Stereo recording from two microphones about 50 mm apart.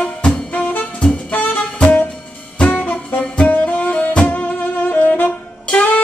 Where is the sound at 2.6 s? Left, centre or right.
Left.